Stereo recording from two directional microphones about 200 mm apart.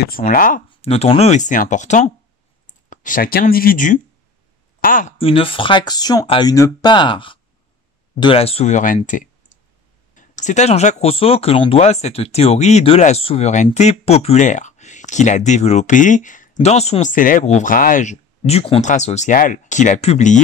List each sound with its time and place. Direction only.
0.0 s speech: 45° left (ahead or behind)
0.7 s speech: 30° left (ahead or behind)
5.1 s speech: 30° left (ahead or behind)